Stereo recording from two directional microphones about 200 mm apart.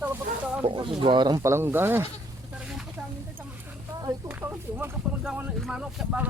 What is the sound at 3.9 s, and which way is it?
Speech, 15° right (ahead or behind).